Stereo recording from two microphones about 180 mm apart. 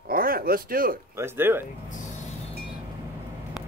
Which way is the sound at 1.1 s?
10° right (ahead or behind).